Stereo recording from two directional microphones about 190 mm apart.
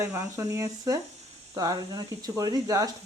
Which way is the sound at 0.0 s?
15° right (ahead or behind).